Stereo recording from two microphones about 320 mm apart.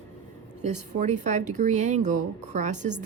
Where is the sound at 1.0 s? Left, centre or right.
Right.